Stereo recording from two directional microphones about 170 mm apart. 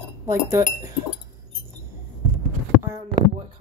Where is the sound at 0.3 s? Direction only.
15° right (ahead or behind).